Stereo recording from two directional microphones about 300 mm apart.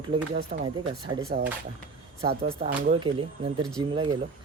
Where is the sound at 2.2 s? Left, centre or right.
Right.